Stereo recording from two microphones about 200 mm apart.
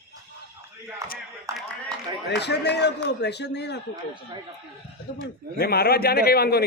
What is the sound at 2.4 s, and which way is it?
Speech, 55° left (ahead or behind).